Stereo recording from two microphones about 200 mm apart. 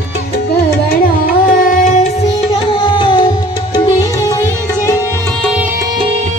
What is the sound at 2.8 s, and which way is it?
Music, 25° left (ahead or behind).